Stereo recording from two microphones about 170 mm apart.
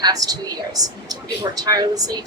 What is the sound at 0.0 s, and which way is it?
A woman's voice, 20° right (ahead or behind).